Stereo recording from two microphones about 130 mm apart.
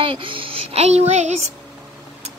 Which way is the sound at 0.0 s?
40° right (ahead or behind).